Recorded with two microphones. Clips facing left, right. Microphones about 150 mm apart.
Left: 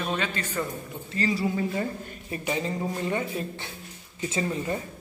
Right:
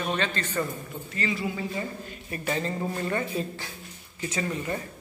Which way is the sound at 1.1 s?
35° left (ahead or behind).